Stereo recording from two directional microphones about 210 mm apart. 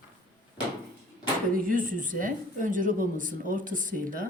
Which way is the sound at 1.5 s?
40° right (ahead or behind).